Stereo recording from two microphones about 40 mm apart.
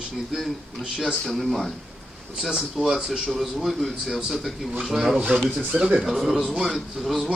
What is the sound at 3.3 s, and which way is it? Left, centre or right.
A man's voice, centre.